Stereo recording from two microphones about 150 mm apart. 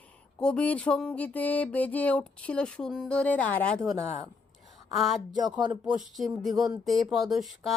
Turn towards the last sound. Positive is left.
turn(degrees=0)  # may be behind; listen again after turning